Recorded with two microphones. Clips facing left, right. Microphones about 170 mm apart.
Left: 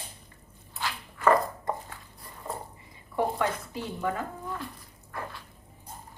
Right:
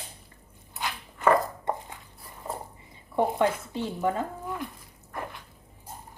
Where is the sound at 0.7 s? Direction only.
20° right (ahead or behind).